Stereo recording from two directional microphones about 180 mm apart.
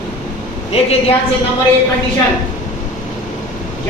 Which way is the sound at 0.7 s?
35° left (ahead or behind).